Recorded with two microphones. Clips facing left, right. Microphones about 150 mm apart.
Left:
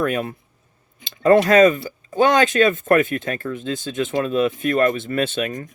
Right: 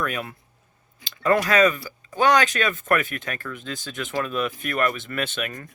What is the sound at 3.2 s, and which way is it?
Speech, 30° left (ahead or behind).